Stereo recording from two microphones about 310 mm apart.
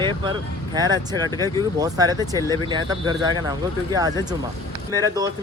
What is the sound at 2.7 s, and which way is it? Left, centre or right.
Speech, centre.